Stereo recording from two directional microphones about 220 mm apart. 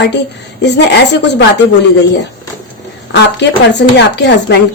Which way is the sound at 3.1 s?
50° left (ahead or behind).